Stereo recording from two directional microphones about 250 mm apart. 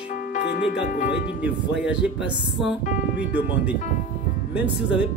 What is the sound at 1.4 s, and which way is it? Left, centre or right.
Speech, centre.